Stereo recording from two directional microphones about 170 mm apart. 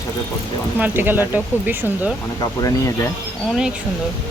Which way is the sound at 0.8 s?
10° right (ahead or behind).